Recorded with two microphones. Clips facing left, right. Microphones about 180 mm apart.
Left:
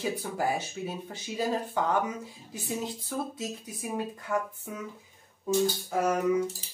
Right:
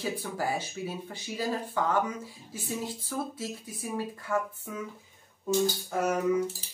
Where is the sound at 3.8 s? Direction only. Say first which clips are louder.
Even; 20° left (ahead or behind).